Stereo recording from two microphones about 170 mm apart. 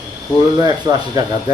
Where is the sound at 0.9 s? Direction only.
30° right (ahead or behind).